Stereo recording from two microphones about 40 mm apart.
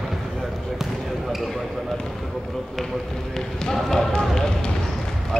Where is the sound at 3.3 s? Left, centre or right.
Centre.